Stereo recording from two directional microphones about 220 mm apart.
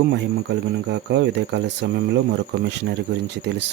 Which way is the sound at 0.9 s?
50° right (ahead or behind).